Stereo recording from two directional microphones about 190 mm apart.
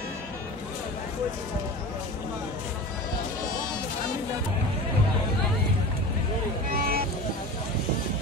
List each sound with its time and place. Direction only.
6.7 s music: 50° right (ahead or behind)